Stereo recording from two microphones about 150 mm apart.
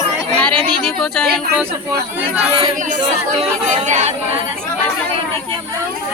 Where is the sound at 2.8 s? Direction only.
55° right (ahead or behind).